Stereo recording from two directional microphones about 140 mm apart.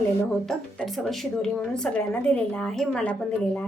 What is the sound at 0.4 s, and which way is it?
A woman's voice, centre (ahead or behind).